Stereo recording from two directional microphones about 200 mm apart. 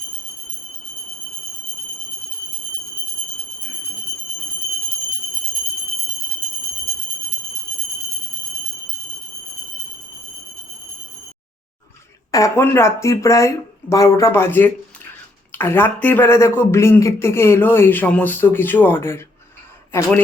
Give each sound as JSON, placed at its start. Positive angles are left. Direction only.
{"t": 12.3, "sound": "speech", "side_deg": 15}